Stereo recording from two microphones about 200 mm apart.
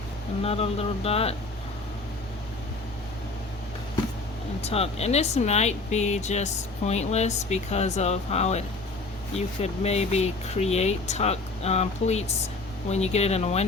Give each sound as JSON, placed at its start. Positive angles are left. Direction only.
{"t": 0.4, "sound": "speech", "side_deg": 30}
{"t": 4.6, "sound": "speech", "side_deg": 30}